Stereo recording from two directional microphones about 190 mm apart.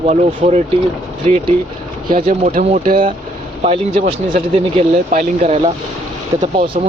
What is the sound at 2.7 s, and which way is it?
Speech, 45° right (ahead or behind).